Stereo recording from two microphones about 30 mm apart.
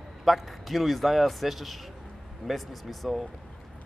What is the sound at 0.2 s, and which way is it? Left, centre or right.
Speech, centre.